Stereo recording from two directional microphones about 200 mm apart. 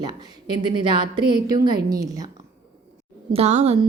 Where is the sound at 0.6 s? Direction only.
25° right (ahead or behind).